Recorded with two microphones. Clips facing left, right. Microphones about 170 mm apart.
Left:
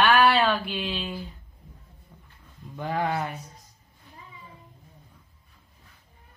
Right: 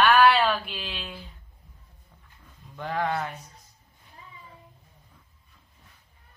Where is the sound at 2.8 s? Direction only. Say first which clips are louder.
Left 1 dB; 5° left (ahead or behind).